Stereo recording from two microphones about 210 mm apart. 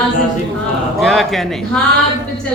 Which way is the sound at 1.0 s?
Centre (ahead or behind).